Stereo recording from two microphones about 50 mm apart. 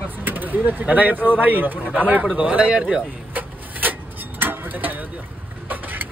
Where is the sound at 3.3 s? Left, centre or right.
Right.